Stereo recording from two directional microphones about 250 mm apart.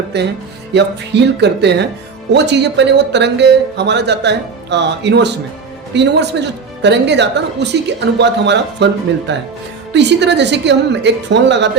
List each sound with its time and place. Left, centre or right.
0.7 s speech: right